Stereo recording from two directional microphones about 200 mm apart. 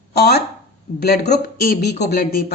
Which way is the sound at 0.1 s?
55° left (ahead or behind).